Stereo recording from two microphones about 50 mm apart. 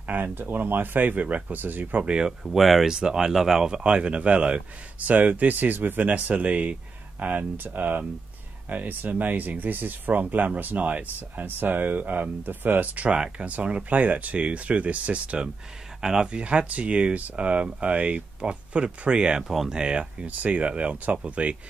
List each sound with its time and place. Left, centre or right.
0.0 s speech: right
2.0 s speech: centre
2.4 s speech: centre
2.9 s speech: centre; by 13.1 s right
13.1 s speech: right
16.0 s speech: centre
16.3 s speech: right
19.4 s speech: centre
19.7 s speech: centre